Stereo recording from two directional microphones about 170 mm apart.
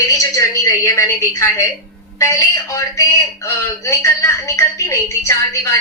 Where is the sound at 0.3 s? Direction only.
20° left (ahead or behind).